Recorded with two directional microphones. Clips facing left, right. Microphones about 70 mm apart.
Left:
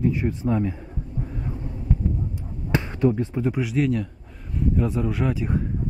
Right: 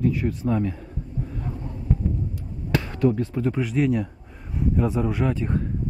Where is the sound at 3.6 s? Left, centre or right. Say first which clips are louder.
Right 1 dB; centre.